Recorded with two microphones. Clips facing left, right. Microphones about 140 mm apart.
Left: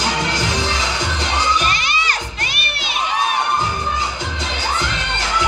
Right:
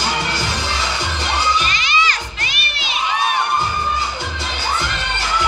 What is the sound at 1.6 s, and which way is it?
Children shouting, 50° left (ahead or behind).